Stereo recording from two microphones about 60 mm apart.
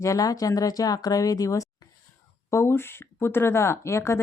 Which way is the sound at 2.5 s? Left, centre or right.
Left.